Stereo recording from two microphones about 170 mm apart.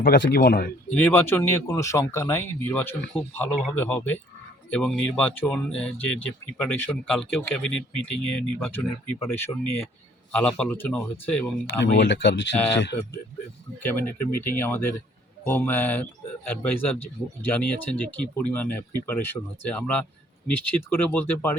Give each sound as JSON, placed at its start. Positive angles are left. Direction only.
{"t": 0.0, "sound": "speech", "side_deg": 65}
{"t": 0.9, "sound": "speech", "side_deg": 10}
{"t": 11.6, "sound": "speech", "side_deg": 90}
{"t": 12.9, "sound": "speech", "side_deg": 35}
{"t": 13.7, "sound": "speech", "side_deg": 10}